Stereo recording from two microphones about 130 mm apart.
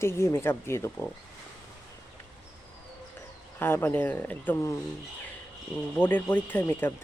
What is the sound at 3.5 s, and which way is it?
Speech, 15° left (ahead or behind).